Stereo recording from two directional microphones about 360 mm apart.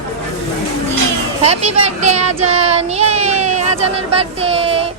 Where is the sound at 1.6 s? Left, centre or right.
Centre.